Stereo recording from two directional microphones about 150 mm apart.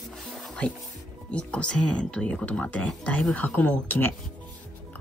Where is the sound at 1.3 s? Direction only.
10° left (ahead or behind).